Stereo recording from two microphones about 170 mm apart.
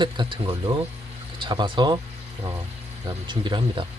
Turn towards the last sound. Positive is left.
turn(degrees=-25)  # may be behind; listen again after turning